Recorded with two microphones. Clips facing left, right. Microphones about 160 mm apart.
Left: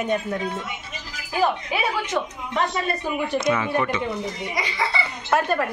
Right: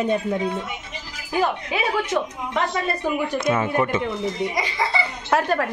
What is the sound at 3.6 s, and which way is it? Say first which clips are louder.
Speech: right 2 dB; 40° right (ahead or behind).